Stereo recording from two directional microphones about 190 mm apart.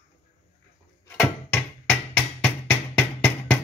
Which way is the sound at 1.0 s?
10° left (ahead or behind).